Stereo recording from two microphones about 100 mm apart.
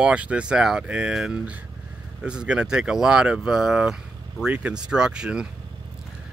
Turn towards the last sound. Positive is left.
turn(degrees=-10)  # may be behind; listen again after turning